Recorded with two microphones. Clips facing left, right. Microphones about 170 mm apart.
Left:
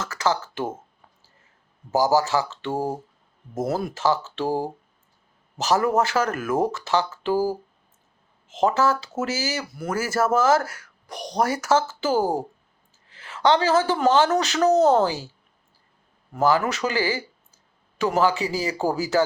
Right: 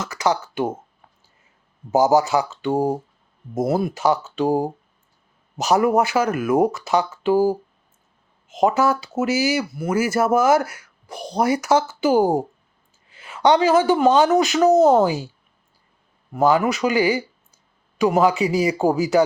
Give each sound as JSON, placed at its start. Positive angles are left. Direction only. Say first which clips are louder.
{"t": 0.0, "sound": "speech", "louder": "right 3 dB", "side_deg": -15}
{"t": 1.9, "sound": "speech", "louder": "right 4 dB", "side_deg": -20}
{"t": 8.6, "sound": "speech", "louder": "right 3 dB", "side_deg": -15}
{"t": 16.3, "sound": "speech", "louder": "right 3 dB", "side_deg": -15}